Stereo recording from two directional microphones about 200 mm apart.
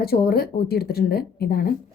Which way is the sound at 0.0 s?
50° left (ahead or behind).